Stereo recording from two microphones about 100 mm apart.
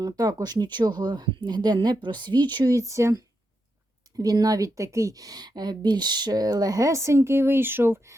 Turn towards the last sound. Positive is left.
turn(degrees=-20)  # may be behind; listen again after turning